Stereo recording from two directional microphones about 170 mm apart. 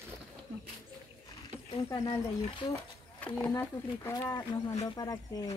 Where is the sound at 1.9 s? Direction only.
20° left (ahead or behind).